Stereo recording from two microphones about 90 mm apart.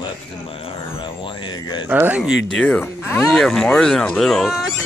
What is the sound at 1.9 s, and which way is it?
Speech, 20° right (ahead or behind).